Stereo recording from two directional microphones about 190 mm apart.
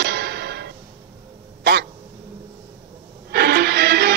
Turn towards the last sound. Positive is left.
turn(degrees=-60)  # may be behind; listen again after turning